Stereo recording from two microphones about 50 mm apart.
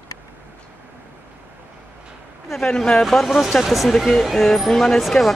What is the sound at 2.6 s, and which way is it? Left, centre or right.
Speech, centre.